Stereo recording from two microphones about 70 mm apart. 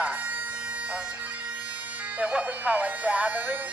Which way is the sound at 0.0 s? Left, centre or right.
Centre.